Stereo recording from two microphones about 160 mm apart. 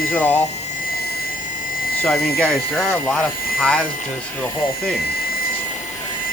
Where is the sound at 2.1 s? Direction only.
80° left.